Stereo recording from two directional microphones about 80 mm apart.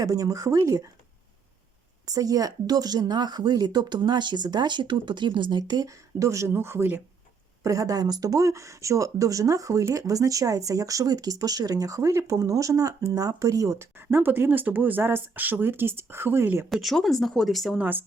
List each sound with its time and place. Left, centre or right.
0.0 s speech: right
2.0 s speech: right
7.6 s speech: right
14.1 s speech: right
16.6 s speech: centre